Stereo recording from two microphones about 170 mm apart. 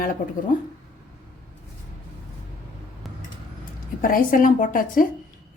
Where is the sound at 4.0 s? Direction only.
55° left (ahead or behind).